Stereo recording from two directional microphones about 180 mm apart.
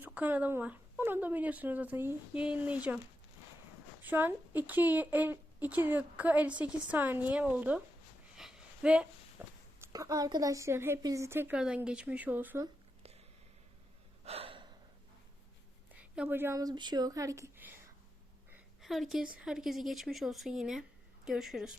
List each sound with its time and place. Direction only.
0.0 s speech: 10° right (ahead or behind)
4.0 s speech: 10° right (ahead or behind)
8.4 s a sound: 5° right (ahead or behind)
9.8 s speech: 20° right (ahead or behind)
14.3 s gasp: 30° right (ahead or behind)
15.9 s speech: 10° right (ahead or behind)
18.5 s a sound: centre (ahead or behind)
19.4 s a woman's voice: 5° right (ahead or behind)